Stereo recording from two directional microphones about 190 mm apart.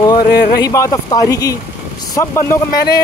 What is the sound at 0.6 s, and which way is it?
Speech, 20° left (ahead or behind).